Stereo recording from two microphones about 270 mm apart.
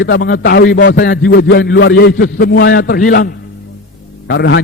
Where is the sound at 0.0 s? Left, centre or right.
Left.